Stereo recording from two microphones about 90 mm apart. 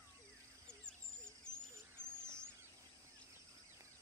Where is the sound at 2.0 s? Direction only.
25° right (ahead or behind).